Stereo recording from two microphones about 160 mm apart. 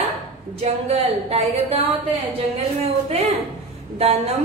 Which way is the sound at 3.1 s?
40° right (ahead or behind).